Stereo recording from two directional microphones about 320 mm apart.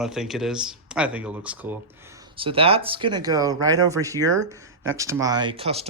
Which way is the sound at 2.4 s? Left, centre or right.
Centre.